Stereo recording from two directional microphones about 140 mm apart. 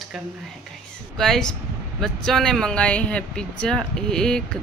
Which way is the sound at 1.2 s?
5° left (ahead or behind).